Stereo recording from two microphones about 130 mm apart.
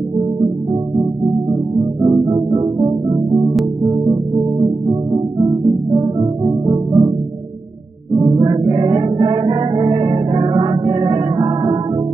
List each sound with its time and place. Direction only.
1.5 s music: 30° right (ahead or behind)
8.2 s music: 35° right (ahead or behind)